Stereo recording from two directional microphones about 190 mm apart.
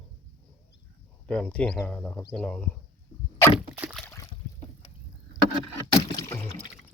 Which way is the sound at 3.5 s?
5° right (ahead or behind).